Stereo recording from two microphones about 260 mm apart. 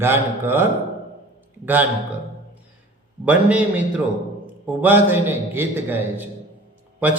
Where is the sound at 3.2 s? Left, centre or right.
Centre.